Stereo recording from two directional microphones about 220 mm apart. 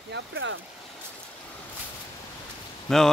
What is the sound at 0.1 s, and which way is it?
Speech, 60° right (ahead or behind).